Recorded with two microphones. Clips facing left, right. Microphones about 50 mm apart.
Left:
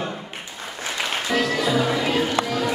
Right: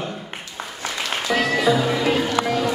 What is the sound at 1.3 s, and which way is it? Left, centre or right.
Music, centre.